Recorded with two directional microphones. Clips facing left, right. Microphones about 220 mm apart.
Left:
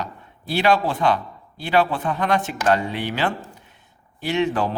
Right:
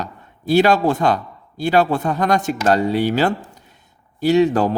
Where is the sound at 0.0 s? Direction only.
40° right (ahead or behind).